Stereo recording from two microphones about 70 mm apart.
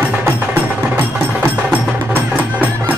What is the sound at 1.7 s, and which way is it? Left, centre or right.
Music, right.